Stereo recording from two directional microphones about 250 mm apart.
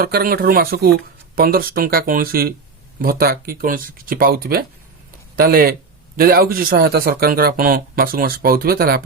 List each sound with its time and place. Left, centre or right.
0.0 s speech: right